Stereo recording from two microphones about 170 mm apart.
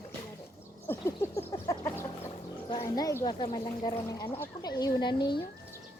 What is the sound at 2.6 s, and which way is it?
Speech, 25° left (ahead or behind).